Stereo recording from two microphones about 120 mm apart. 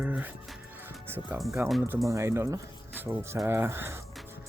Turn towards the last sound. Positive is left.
turn(degrees=-20)  # may be behind; listen again after turning